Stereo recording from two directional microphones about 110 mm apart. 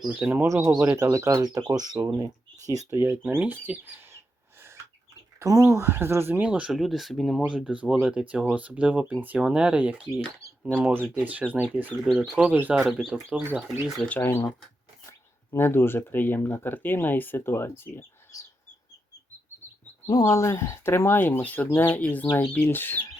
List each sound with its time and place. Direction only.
0.1 s speech: 15° right (ahead or behind)
0.4 s speech: 25° right (ahead or behind)
3.0 s speech: 20° right (ahead or behind)
5.4 s speech: 30° right (ahead or behind)
6.5 s speech: 5° right (ahead or behind)
7.4 s speech: 10° right (ahead or behind)
12.0 s speech: centre (ahead or behind)
12.7 s speech: centre (ahead or behind)
14.0 s speech: 15° left (ahead or behind)
15.5 s speech: 20° left (ahead or behind)
20.1 s speech: 30° left (ahead or behind)